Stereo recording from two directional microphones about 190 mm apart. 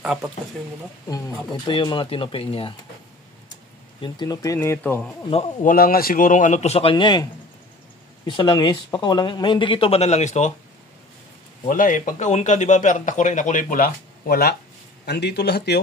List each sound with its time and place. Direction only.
0.0 s speech: 5° right (ahead or behind)
1.7 s speech: 25° left (ahead or behind)
4.0 s speech: 20° left (ahead or behind)
5.6 s speech: 50° left (ahead or behind); by 7.2 s 25° left (ahead or behind)
8.3 s speech: 25° left (ahead or behind)
11.6 s a man's voice: 45° left (ahead or behind); by 15.8 s 60° left (ahead or behind)